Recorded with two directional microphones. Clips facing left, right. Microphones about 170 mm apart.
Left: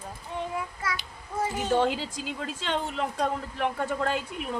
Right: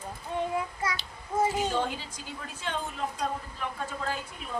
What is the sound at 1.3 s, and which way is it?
Speech, 20° right (ahead or behind).